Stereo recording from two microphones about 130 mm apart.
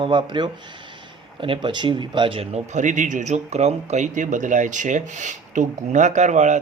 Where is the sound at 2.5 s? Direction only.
70° right (ahead or behind).